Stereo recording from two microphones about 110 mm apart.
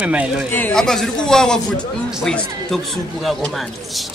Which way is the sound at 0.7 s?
5° left (ahead or behind).